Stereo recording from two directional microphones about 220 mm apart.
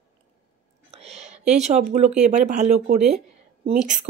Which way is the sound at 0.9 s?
30° right (ahead or behind).